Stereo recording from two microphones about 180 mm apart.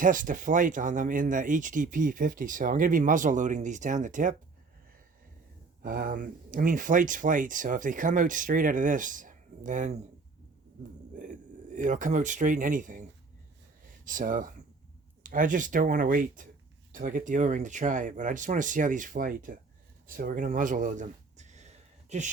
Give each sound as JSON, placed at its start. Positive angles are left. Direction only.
{"t": 0.0, "sound": "speech", "side_deg": -50}
{"t": 5.8, "sound": "speech", "side_deg": -50}
{"t": 11.2, "sound": "speech", "side_deg": -45}